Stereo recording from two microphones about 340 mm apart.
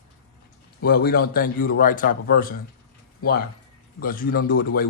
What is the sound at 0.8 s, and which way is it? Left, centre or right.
Speech, left.